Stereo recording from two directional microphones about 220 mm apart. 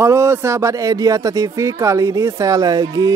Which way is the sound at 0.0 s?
10° right (ahead or behind).